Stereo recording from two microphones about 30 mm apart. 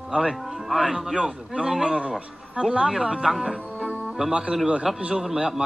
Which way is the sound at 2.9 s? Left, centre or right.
Centre.